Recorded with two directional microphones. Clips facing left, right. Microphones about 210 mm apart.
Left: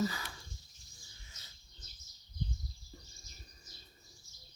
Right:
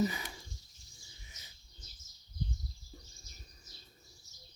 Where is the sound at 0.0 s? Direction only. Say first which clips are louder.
Right 2 dB; 20° right (ahead or behind).